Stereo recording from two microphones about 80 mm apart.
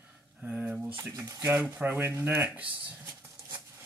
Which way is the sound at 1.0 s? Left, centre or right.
Right.